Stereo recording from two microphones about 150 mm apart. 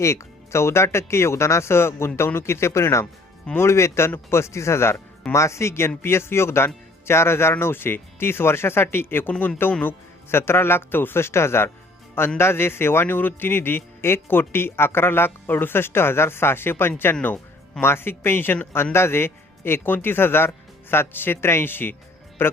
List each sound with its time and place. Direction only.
0.0 s speech: 20° left (ahead or behind)